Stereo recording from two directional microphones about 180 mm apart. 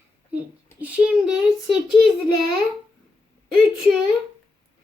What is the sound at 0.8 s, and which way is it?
A child's voice, 5° right (ahead or behind).